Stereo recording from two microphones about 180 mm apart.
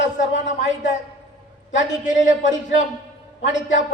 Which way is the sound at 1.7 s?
40° left (ahead or behind).